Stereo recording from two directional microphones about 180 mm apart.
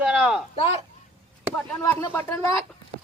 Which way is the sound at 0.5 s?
35° left (ahead or behind).